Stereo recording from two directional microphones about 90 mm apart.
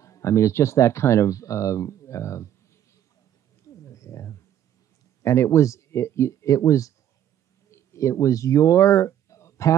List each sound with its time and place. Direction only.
0.0 s speech: 35° left (ahead or behind)
3.6 s a sound: 35° left (ahead or behind)
5.2 s speech: 30° left (ahead or behind)